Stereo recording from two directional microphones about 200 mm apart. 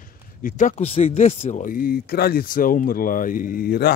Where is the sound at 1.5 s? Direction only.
40° left (ahead or behind).